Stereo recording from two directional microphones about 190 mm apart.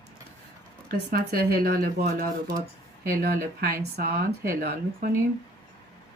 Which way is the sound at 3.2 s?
55° right (ahead or behind).